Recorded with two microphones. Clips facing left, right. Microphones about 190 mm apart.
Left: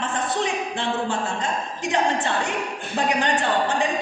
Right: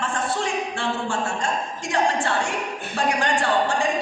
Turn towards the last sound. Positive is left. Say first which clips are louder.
# even
turn(degrees=20)  # may be behind; listen again after turning